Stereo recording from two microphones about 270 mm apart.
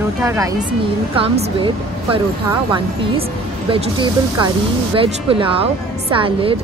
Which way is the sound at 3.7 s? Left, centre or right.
Centre.